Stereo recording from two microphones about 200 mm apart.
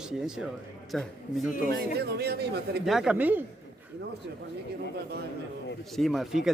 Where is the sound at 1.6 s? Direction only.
50° right (ahead or behind).